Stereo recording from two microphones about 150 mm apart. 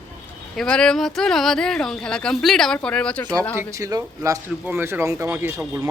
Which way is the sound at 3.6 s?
20° right (ahead or behind).